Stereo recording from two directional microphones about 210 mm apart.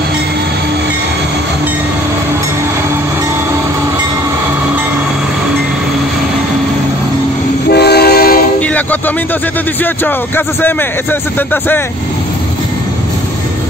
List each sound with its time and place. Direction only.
7.7 s train: 50° left (ahead or behind)
8.5 s train: 5° left (ahead or behind)
10.0 s a man's voice: 10° left (ahead or behind)